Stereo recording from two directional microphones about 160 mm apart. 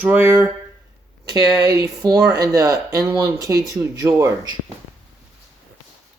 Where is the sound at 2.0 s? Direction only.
25° right (ahead or behind).